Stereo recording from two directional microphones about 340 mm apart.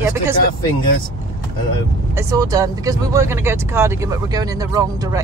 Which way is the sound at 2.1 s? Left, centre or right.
Centre.